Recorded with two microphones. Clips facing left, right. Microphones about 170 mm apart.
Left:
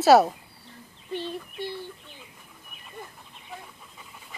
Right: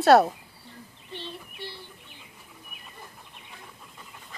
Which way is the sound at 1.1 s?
45° left (ahead or behind).